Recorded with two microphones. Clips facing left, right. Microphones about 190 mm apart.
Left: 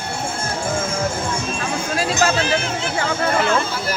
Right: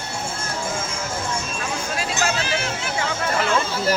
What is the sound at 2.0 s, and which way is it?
Music, 40° left (ahead or behind).